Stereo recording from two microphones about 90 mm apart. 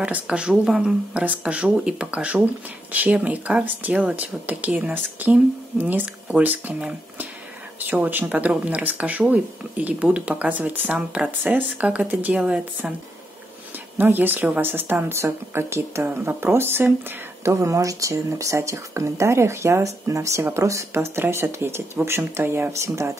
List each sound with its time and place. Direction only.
0.0 s speech: 15° right (ahead or behind)
13.9 s speech: 20° right (ahead or behind)